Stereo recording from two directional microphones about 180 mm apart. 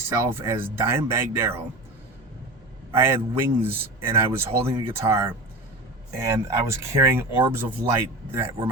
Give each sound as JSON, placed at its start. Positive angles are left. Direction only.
{"t": 0.3, "sound": "speech", "side_deg": -10}
{"t": 2.9, "sound": "speech", "side_deg": -15}